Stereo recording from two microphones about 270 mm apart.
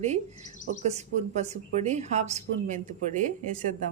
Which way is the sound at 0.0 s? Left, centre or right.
Right.